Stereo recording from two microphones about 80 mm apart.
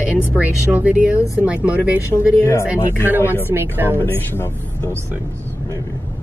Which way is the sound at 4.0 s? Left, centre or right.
Left.